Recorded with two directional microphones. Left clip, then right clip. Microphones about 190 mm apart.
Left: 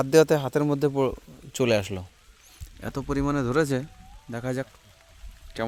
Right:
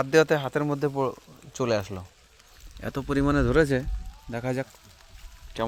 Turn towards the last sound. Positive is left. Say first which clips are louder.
# right 1 dB
turn(degrees=15)  # may be behind; listen again after turning